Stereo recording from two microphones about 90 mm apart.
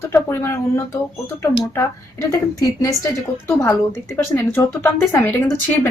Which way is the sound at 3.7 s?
25° left (ahead or behind).